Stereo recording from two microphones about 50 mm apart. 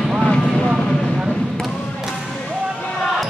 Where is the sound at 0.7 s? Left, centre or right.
Centre.